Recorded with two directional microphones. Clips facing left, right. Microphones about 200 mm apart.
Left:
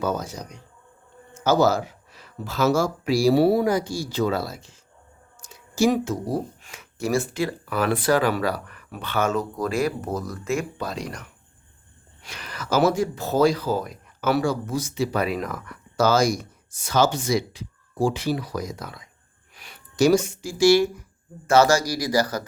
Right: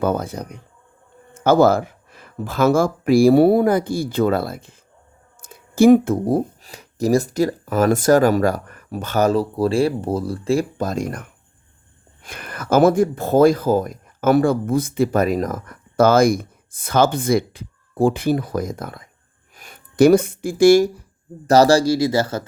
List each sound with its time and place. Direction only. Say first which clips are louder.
0.0 s speech: right 5 dB; 55° right (ahead or behind)
5.4 s a sound: right 7 dB; 55° right (ahead or behind)
6.6 s speech: right 7 dB; 35° right (ahead or behind)
21.4 s speech: right 5 dB; 35° right (ahead or behind)